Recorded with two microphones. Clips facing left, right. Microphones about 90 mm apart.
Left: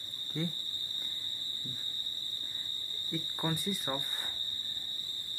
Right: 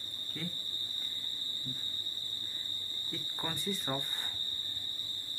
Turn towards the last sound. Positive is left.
turn(degrees=10)  # may be behind; listen again after turning